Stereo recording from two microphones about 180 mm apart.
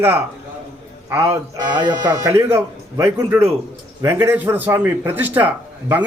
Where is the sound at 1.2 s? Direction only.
20° right (ahead or behind).